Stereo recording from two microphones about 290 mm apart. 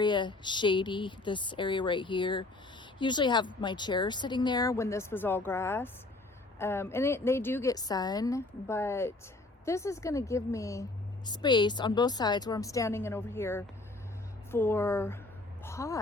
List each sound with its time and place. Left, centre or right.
0.0 s speech: centre